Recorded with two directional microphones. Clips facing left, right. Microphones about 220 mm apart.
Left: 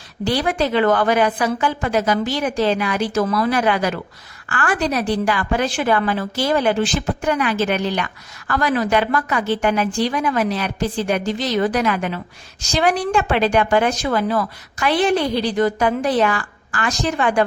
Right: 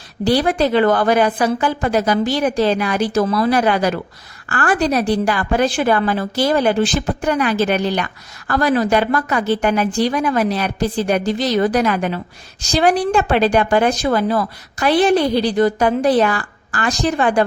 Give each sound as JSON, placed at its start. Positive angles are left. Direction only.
{"t": 0.3, "sound": "a woman's voice", "side_deg": -35}